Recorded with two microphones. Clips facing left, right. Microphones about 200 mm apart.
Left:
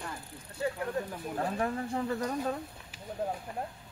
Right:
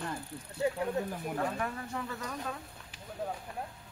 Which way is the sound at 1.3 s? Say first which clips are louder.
Left 4 dB; 35° left (ahead or behind).